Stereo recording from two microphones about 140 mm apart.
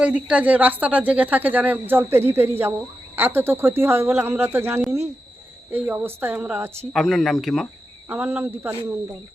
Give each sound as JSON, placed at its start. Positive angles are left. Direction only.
{"t": 0.0, "sound": "a woman's voice", "side_deg": -10}
{"t": 6.9, "sound": "speech", "side_deg": 0}
{"t": 8.0, "sound": "a woman's voice", "side_deg": -15}